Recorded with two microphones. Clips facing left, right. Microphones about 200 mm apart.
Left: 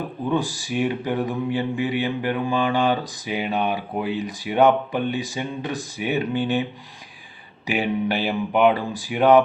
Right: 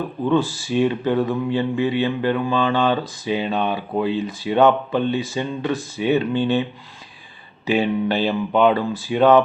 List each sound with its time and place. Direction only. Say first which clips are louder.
0.3 s speech: right 5 dB; 15° left (ahead or behind)
7.7 s speech: right 3 dB; 15° left (ahead or behind)